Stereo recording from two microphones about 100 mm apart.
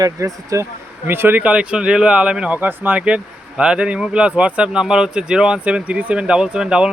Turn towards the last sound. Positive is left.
turn(degrees=-10)  # may be behind; listen again after turning